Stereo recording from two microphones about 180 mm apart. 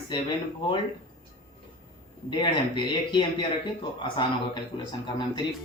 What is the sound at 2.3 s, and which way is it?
Speech, 25° left (ahead or behind).